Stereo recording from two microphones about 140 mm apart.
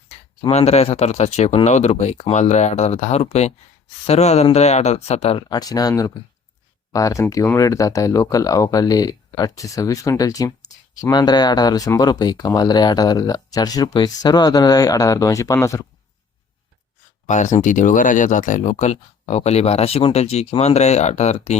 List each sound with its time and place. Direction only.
0.5 s speech: 45° left (ahead or behind)
5.5 s speech: 25° left (ahead or behind)
17.2 s speech: 60° left (ahead or behind)